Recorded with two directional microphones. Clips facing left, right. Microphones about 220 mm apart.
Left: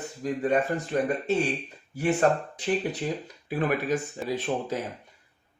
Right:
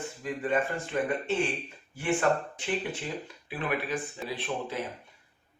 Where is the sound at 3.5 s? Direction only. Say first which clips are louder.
Left 6 dB; 45° left (ahead or behind).